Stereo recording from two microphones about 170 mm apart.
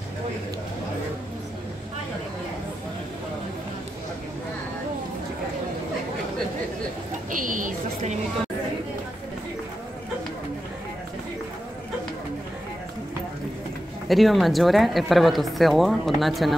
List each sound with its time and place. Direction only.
7.2 s speech: 50° right (ahead or behind)
14.0 s speech: centre (ahead or behind)